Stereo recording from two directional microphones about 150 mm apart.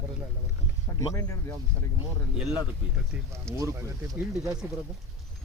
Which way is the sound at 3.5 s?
20° right (ahead or behind).